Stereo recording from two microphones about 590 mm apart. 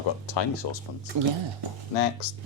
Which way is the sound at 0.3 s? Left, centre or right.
Left.